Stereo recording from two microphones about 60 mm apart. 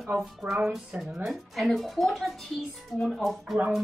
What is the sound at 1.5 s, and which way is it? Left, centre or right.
Speech, centre.